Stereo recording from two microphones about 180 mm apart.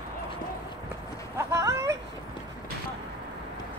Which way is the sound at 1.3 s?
20° right (ahead or behind).